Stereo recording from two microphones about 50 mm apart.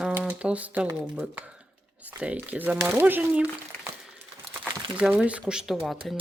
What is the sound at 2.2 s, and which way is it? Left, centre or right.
Speech, right.